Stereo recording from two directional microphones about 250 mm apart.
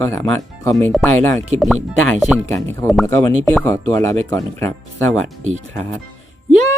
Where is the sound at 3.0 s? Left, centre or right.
Centre.